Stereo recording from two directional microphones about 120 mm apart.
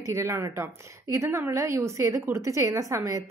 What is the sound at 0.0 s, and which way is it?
A woman's voice, 25° right (ahead or behind).